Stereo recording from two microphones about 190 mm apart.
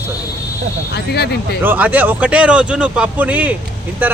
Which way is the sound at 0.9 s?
60° left (ahead or behind).